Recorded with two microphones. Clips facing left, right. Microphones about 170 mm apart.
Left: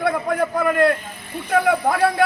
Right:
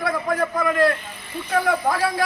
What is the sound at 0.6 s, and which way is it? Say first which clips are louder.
Speech: left 2 dB; 50° left (ahead or behind).